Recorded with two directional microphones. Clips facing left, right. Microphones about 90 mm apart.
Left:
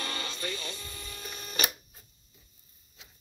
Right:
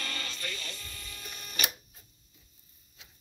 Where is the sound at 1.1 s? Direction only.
30° left (ahead or behind).